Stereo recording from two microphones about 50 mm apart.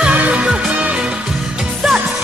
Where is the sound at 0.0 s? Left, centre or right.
Right.